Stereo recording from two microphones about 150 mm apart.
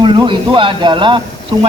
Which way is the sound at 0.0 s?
30° right (ahead or behind).